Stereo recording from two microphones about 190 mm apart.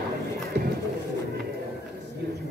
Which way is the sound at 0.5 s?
60° right (ahead or behind).